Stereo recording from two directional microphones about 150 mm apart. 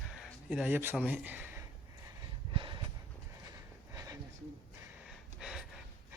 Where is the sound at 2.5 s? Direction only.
35° right (ahead or behind).